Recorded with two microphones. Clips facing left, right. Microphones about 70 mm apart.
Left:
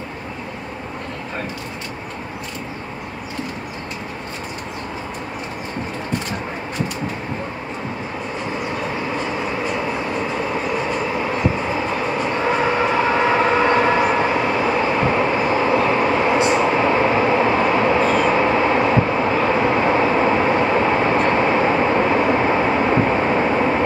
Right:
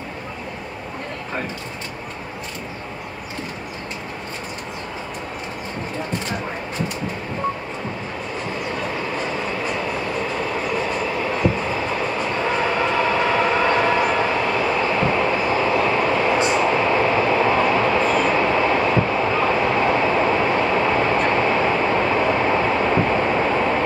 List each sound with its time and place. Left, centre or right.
9.4 s train: centre